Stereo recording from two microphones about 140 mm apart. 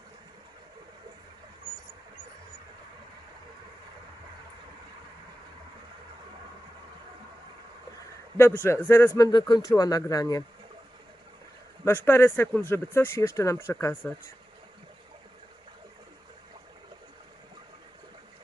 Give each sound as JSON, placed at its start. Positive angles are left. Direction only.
{"t": 8.6, "sound": "speech", "side_deg": 20}
{"t": 11.9, "sound": "speech", "side_deg": 15}